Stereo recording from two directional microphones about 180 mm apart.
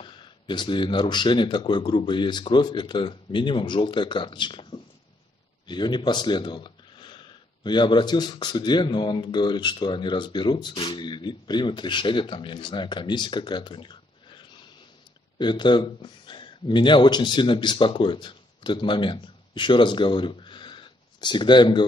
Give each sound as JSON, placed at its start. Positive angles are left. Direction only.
{"t": 0.0, "sound": "speech", "side_deg": 25}